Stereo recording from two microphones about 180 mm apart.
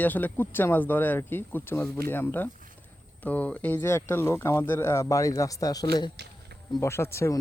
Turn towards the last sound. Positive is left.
turn(degrees=15)  # may be behind; listen again after turning